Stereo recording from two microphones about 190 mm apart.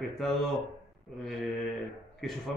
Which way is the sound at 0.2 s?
Centre (ahead or behind).